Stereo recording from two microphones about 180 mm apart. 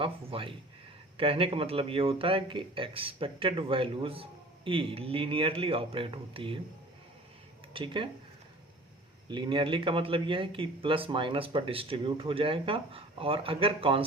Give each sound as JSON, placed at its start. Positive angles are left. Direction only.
{"t": 0.0, "sound": "speech", "side_deg": -30}
{"t": 7.7, "sound": "speech", "side_deg": -30}
{"t": 9.3, "sound": "speech", "side_deg": -25}